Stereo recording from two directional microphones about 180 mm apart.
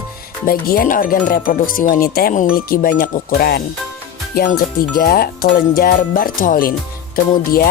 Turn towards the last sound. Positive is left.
turn(degrees=55)  # may be behind; listen again after turning